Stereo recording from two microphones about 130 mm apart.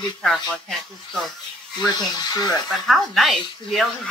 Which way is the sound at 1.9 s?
30° left (ahead or behind).